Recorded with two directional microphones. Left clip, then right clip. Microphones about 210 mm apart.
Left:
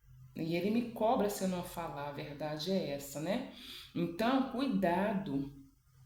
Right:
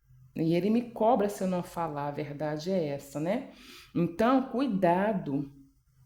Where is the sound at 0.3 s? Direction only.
50° right (ahead or behind).